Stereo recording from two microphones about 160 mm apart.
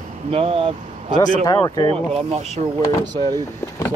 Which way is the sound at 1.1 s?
25° left (ahead or behind).